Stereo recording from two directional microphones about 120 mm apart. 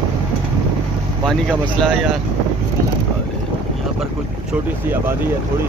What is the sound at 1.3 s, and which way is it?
Speech, 5° left (ahead or behind).